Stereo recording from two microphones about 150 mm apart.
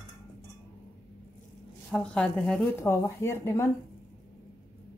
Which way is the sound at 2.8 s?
15° left (ahead or behind).